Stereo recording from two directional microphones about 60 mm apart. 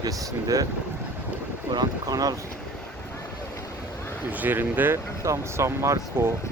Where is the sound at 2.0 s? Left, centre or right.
Right.